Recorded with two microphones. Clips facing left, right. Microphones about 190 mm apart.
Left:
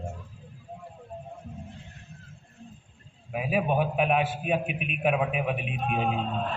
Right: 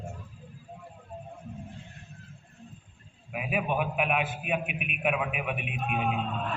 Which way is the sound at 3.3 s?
30° left (ahead or behind).